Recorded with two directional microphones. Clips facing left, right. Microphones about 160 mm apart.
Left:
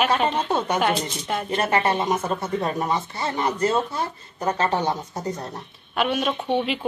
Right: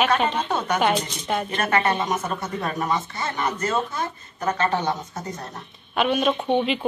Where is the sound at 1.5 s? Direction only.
30° left (ahead or behind).